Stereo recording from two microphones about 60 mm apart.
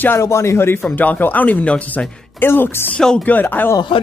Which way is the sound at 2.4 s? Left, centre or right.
Left.